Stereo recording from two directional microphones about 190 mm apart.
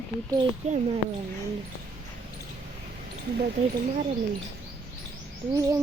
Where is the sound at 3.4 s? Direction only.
40° right (ahead or behind).